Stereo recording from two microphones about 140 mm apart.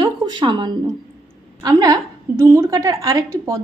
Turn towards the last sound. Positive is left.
turn(degrees=-25)  # may be behind; listen again after turning